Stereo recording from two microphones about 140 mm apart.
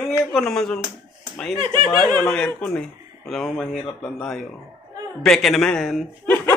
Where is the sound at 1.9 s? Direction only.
15° left (ahead or behind).